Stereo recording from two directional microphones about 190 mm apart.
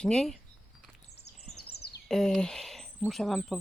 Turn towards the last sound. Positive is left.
turn(degrees=0)  # may be behind; listen again after turning